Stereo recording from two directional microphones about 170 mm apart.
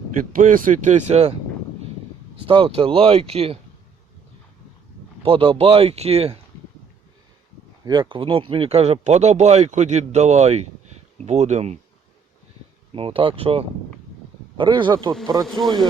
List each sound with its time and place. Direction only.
0.3 s speech: 55° right (ahead or behind)
2.5 s speech: 30° right (ahead or behind)
5.2 s speech: 30° right (ahead or behind)
7.9 s speech: 25° right (ahead or behind)
12.9 s speech: 30° right (ahead or behind)
15.4 s speech: centre (ahead or behind)